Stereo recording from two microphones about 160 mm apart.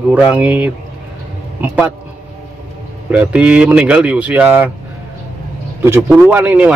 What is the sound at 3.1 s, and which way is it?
Speech, 5° right (ahead or behind).